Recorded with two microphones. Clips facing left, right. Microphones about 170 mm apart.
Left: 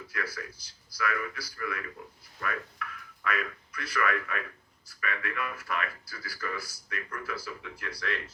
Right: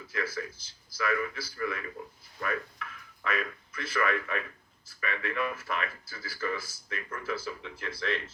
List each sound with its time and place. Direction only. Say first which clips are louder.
0.3 s speech: right 5 dB; 25° right (ahead or behind)